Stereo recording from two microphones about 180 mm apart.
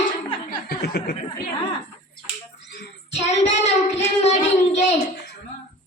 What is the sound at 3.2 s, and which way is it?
Child singing, 35° left (ahead or behind).